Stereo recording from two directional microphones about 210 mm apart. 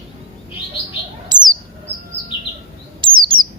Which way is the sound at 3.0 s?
25° right (ahead or behind).